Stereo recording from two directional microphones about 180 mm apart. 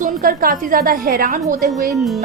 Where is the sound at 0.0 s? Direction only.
50° right (ahead or behind).